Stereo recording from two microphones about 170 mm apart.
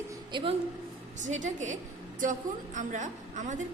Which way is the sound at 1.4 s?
45° right (ahead or behind).